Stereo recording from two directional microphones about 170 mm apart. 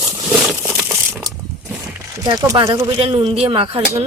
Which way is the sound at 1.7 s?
15° right (ahead or behind).